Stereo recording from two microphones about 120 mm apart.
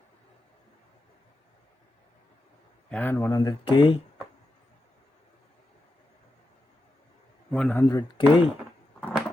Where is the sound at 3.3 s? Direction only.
35° left (ahead or behind).